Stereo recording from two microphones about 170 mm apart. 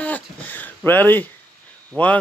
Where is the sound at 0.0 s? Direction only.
10° left (ahead or behind).